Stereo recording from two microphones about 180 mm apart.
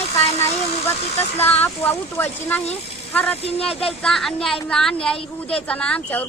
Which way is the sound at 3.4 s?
35° left (ahead or behind).